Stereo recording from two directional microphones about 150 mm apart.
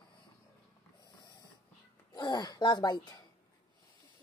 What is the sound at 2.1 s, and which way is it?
Speech, 25° left (ahead or behind).